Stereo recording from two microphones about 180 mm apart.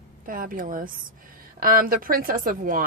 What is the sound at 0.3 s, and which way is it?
A woman's voice, 50° right (ahead or behind).